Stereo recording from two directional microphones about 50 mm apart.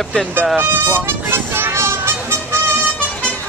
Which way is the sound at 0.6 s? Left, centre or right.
Right.